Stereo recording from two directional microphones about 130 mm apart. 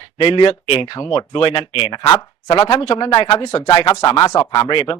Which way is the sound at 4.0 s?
30° left (ahead or behind).